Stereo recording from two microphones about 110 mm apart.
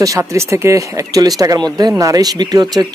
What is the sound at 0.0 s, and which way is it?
Speech, 30° right (ahead or behind).